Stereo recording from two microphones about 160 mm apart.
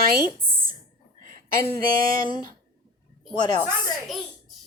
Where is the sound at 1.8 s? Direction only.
65° right (ahead or behind).